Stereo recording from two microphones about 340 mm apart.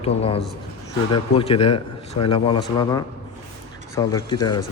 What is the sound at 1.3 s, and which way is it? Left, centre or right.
Speech, centre.